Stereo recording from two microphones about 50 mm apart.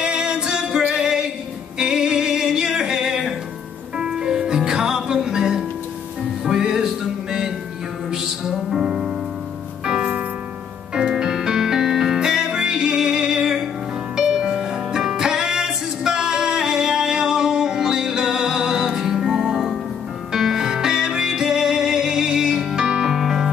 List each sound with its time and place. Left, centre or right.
0.0 s music: centre
9.8 s music: right; by 23.5 s centre